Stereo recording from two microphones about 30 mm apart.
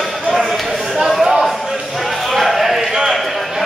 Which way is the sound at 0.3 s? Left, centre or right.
Centre.